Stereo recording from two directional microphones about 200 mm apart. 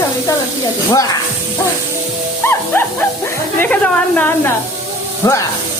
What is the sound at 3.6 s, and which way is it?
Speech, 5° left (ahead or behind).